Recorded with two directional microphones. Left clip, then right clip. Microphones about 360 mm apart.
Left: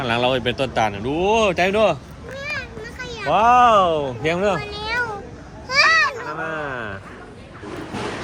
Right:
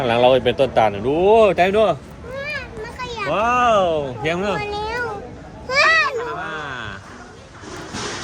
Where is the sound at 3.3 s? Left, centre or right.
Centre.